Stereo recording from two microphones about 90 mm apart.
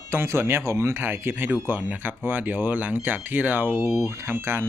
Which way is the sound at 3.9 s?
35° left (ahead or behind).